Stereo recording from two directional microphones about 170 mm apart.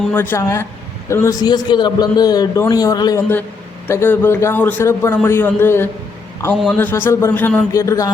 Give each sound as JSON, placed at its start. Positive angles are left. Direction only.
{"t": 0.1, "sound": "a man's voice", "side_deg": 10}